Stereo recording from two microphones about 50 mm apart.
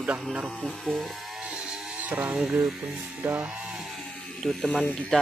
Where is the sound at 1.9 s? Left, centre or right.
Right.